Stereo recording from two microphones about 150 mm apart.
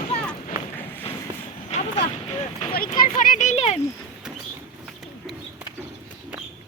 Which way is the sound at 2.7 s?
75° left (ahead or behind).